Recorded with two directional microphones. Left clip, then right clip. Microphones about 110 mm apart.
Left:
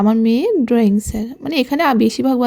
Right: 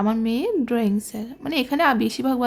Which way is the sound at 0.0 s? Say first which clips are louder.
Left 7 dB; 45° left (ahead or behind).